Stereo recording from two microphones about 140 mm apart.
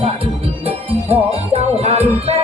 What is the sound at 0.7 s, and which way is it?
Music, 45° right (ahead or behind).